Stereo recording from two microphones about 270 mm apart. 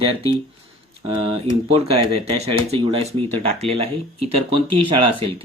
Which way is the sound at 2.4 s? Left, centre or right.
Right.